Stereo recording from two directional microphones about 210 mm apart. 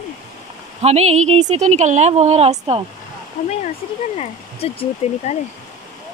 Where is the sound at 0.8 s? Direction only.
30° right (ahead or behind).